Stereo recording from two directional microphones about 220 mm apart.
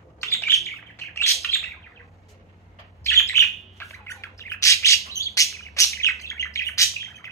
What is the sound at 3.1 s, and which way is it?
Bird, 15° left (ahead or behind).